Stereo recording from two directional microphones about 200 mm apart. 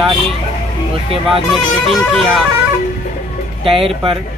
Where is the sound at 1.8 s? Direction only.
Centre (ahead or behind).